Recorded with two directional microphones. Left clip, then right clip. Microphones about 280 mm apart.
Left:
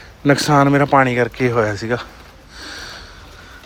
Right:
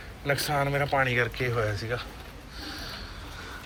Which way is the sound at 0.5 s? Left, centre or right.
Left.